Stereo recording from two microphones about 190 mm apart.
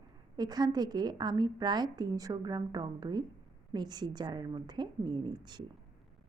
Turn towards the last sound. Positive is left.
turn(degrees=-25)  # may be behind; listen again after turning